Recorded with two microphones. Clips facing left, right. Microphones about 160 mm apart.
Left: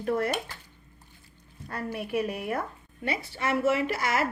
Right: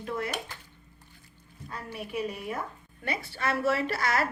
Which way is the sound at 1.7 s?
60° left (ahead or behind).